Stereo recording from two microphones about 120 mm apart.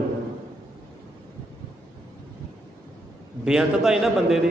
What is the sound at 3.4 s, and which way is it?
Speech, 5° right (ahead or behind).